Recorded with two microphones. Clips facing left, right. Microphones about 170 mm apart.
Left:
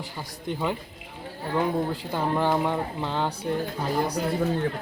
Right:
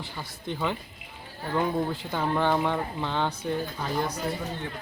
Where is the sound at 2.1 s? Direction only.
5° left (ahead or behind).